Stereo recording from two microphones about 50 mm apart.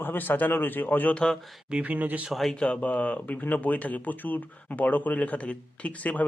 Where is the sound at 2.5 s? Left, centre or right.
Left.